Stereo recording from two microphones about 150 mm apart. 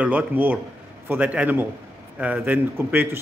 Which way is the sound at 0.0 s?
10° right (ahead or behind).